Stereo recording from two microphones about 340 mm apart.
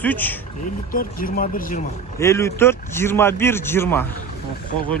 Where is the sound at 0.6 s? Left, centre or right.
Left.